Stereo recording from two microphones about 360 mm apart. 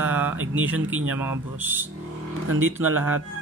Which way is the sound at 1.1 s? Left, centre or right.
Centre.